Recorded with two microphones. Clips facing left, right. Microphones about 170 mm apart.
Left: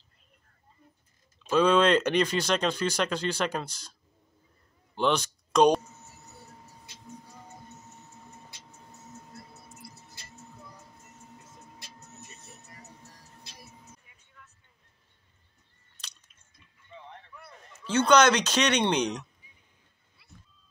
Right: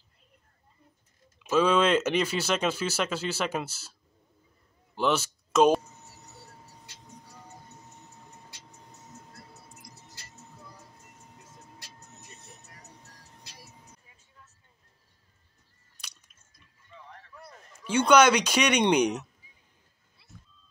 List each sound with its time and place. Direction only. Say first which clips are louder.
1.4 s speech: left 1 dB; 5° right (ahead or behind)
4.9 s speech: even; 5° right (ahead or behind)
14.0 s music: left 1 dB; 25° right (ahead or behind)
16.0 s a sound: even; 10° right (ahead or behind)
16.9 s a sound: left 3 dB; 25° left (ahead or behind)
17.8 s speech: right 1 dB; 10° right (ahead or behind)
20.2 s vehicle: right 1 dB; 30° right (ahead or behind)